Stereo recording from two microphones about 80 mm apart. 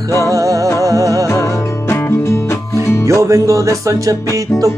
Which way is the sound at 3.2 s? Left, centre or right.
Right.